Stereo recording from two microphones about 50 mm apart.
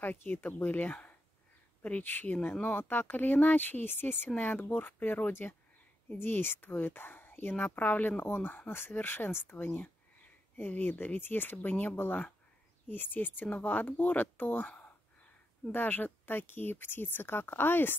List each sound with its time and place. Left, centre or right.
0.0 s speech: left
5.3 s speech: left
6.0 s speech: left
10.6 s speech: left